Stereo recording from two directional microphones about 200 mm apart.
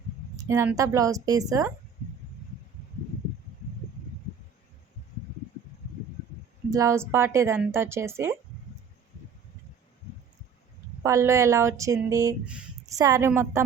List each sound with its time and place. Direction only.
0.4 s a woman's voice: 10° right (ahead or behind)
6.7 s a woman's voice: 15° right (ahead or behind)
11.0 s a woman's voice: 15° right (ahead or behind)